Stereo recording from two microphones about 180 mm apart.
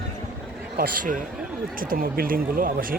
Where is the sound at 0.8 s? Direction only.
50° right (ahead or behind).